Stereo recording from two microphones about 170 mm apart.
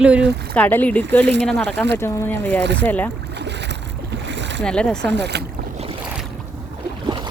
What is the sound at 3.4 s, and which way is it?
Boat, 90° right.